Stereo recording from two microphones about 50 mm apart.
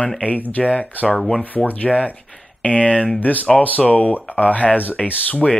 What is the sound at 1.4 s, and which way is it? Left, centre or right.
Speech, left.